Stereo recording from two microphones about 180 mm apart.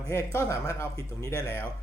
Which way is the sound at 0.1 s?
15° left (ahead or behind).